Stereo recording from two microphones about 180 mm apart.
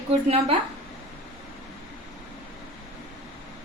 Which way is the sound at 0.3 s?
35° right (ahead or behind).